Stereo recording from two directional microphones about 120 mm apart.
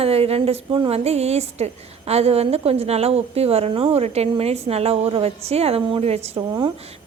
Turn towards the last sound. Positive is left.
turn(degrees=-40)  # may be behind; listen again after turning